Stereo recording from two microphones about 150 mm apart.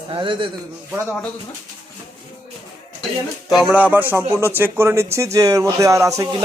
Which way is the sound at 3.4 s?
Centre (ahead or behind).